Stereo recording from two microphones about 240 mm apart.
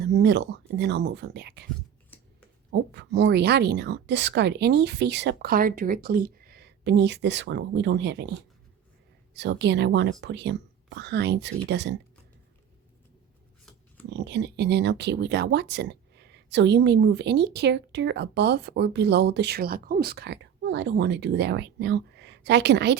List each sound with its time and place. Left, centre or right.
0.0 s speech: right
2.6 s speech: right
14.1 s speech: right